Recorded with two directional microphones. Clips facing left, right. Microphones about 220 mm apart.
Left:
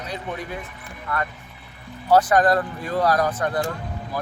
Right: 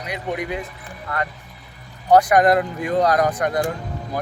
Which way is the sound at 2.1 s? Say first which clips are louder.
Right 3 dB; 15° right (ahead or behind).